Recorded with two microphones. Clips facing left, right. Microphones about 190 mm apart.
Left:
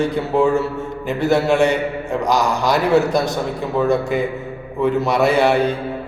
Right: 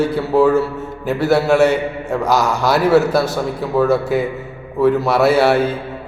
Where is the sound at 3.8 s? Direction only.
5° right (ahead or behind).